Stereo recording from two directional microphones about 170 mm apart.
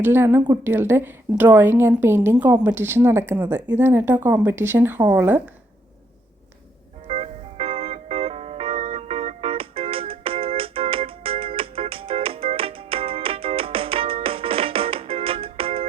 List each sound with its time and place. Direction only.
0.0 s a woman's voice: 15° right (ahead or behind)
7.1 s music: 35° right (ahead or behind)